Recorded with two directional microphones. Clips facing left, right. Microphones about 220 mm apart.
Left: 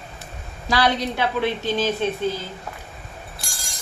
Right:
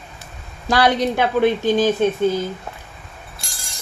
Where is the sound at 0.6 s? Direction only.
50° right (ahead or behind).